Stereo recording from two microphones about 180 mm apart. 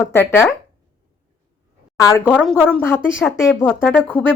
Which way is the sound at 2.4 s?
5° left (ahead or behind).